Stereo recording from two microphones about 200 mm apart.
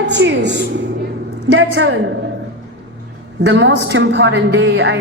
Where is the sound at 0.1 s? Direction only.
60° right (ahead or behind).